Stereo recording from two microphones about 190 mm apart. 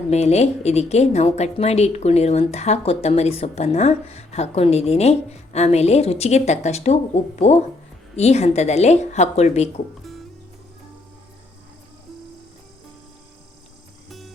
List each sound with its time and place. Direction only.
0.1 s a woman's voice: 35° left (ahead or behind)
14.1 s music: centre (ahead or behind)